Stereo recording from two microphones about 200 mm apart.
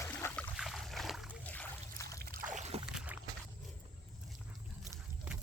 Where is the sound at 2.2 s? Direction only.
50° right (ahead or behind).